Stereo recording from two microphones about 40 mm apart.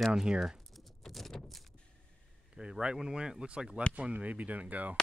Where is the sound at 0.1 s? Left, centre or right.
Centre.